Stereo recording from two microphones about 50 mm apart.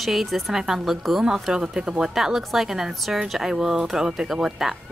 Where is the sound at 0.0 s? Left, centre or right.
Centre.